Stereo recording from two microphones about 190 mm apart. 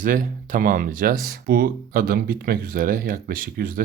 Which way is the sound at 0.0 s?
45° right (ahead or behind).